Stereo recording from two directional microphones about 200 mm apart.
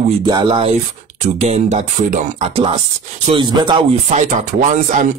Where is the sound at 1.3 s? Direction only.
35° right (ahead or behind).